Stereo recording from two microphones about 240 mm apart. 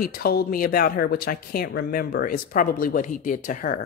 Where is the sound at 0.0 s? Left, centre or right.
Left.